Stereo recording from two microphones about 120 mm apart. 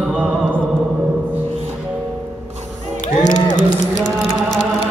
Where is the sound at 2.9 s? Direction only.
90° left.